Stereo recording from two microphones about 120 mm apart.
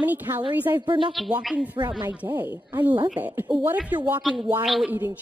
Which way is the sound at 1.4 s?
5° right (ahead or behind).